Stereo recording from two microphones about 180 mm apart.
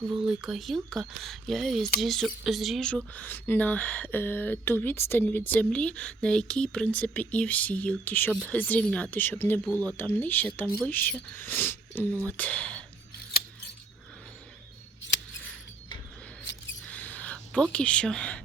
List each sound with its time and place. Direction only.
0.3 s speech: 5° right (ahead or behind)
16.4 s mouse: 90° left
16.8 s a sound: 10° left (ahead or behind)